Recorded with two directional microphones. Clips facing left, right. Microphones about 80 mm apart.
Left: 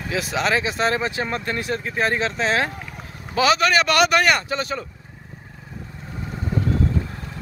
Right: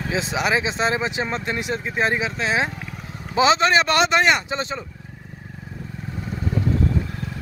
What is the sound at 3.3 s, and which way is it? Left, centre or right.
Speech, right.